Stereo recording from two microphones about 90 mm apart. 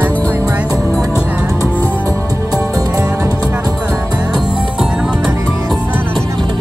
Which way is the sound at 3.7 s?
10° right (ahead or behind).